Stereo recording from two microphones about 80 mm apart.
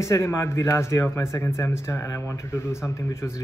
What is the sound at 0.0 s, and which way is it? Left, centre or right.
A man's voice, left.